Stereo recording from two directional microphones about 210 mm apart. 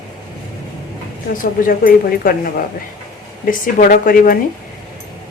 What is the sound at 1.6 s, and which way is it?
Speech, 40° left (ahead or behind).